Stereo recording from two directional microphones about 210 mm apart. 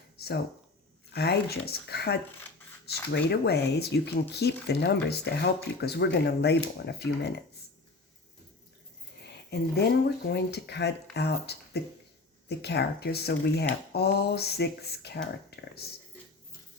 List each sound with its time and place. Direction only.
0.2 s speech: 50° left (ahead or behind)
9.2 s speech: 50° left (ahead or behind)